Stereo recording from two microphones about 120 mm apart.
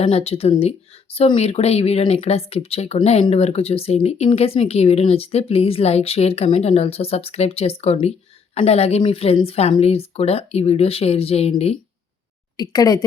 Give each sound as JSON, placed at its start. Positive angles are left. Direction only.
{"t": 0.0, "sound": "speech", "side_deg": 55}
{"t": 12.5, "sound": "a woman's voice", "side_deg": 30}